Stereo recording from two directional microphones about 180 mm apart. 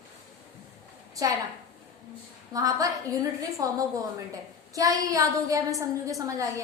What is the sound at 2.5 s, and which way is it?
A woman's voice, 20° right (ahead or behind).